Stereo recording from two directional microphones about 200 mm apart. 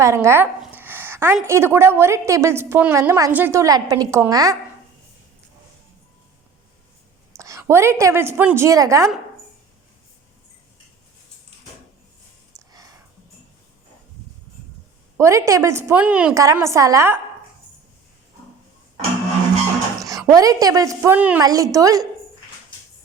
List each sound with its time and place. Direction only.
0.0 s a woman's voice: 15° right (ahead or behind)
7.3 s a woman's voice: 15° right (ahead or behind)
12.5 s a sound: 15° right (ahead or behind)
15.2 s a woman's voice: 15° right (ahead or behind)
16.3 s a woman's voice: 15° right (ahead or behind)
20.1 s a woman's voice: 15° right (ahead or behind)